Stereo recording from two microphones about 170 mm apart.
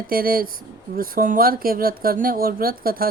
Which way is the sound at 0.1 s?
60° right (ahead or behind).